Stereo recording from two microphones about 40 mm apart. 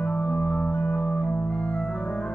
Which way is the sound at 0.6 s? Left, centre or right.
Left.